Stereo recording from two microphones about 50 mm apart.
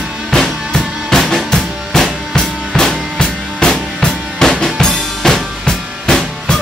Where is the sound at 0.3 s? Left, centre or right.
Centre.